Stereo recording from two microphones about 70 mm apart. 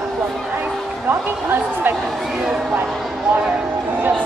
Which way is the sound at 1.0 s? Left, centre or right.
Right.